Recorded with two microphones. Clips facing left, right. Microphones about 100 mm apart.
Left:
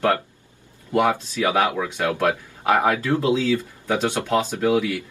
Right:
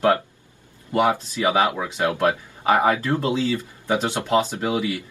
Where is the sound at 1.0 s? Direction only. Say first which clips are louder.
Right 3 dB; 15° right (ahead or behind).